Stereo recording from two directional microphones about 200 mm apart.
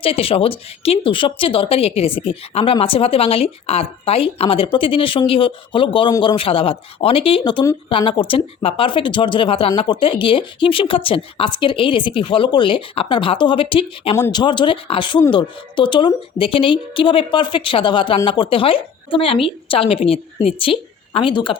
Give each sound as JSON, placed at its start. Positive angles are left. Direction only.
{"t": 0.0, "sound": "speech", "side_deg": 30}